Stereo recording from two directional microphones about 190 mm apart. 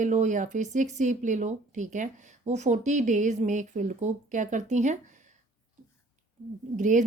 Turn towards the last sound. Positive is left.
turn(degrees=-40)  # may be behind; listen again after turning